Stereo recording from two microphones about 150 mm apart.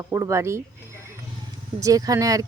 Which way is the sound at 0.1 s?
20° right (ahead or behind).